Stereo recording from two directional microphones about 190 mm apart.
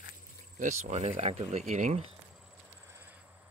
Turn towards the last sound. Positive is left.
turn(degrees=-10)  # may be behind; listen again after turning